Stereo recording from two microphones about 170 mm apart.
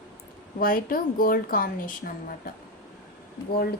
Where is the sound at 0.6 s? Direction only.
55° left (ahead or behind).